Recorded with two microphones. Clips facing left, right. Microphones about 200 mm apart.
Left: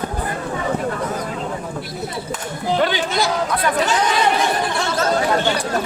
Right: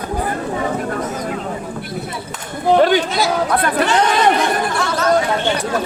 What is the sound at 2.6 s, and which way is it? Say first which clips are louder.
Chatter: right 7 dB; 50° right (ahead or behind).